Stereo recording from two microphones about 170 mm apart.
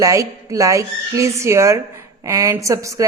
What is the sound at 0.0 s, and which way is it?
A woman's voice, 20° right (ahead or behind).